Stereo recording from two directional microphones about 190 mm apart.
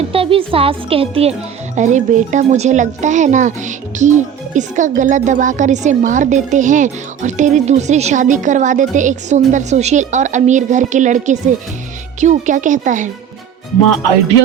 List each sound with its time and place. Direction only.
0.1 s a woman's voice: 30° right (ahead or behind)